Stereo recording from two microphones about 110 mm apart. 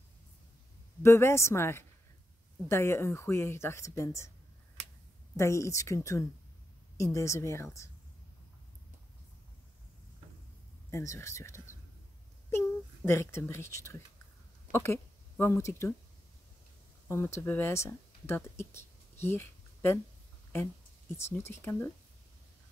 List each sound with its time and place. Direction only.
1.0 s speech: 25° left (ahead or behind)
5.3 s speech: 25° left (ahead or behind)
10.9 s a woman's voice: 25° left (ahead or behind)
17.1 s speech: 25° left (ahead or behind)
21.2 s speech: 20° left (ahead or behind)